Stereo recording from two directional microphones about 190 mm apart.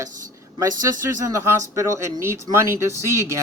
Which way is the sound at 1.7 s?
15° right (ahead or behind).